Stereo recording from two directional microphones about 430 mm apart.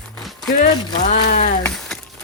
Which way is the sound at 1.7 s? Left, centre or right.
Centre.